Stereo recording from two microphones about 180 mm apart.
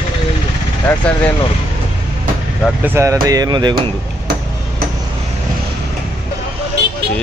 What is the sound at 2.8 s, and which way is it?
Speech, 15° right (ahead or behind).